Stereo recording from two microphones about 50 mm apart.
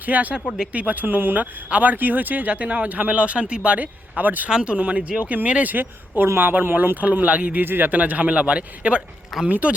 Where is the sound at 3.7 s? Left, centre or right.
Right.